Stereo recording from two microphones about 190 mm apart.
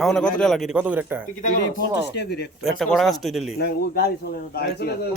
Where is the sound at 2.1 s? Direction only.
60° left (ahead or behind).